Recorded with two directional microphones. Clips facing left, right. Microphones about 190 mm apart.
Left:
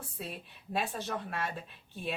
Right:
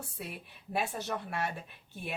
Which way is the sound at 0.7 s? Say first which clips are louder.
Even; 10° right (ahead or behind).